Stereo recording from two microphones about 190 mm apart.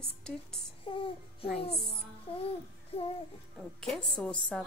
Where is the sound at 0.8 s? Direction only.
30° left (ahead or behind).